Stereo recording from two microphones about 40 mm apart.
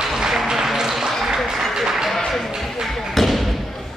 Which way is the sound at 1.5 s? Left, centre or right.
Centre.